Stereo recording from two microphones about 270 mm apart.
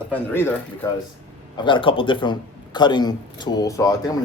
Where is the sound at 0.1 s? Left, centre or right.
Centre.